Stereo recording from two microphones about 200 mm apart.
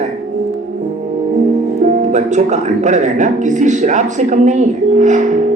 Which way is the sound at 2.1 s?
35° right (ahead or behind).